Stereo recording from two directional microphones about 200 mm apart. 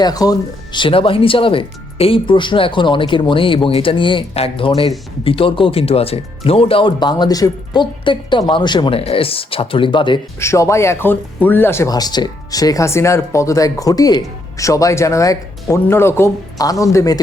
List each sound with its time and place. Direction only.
0.0 s speech: 20° left (ahead or behind)
10.4 s speech: 15° left (ahead or behind)